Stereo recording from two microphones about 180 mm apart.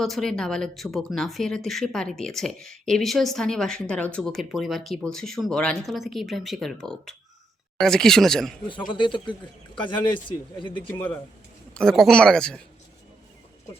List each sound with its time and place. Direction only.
0.0 s speech: centre (ahead or behind)
8.9 s speech: 25° left (ahead or behind)
10.9 s speech: 10° left (ahead or behind)